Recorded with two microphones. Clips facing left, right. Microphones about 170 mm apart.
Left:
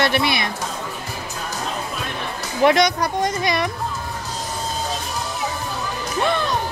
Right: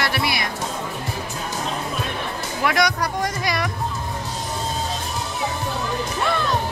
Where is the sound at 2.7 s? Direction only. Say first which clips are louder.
Left 3 dB; 20° left (ahead or behind).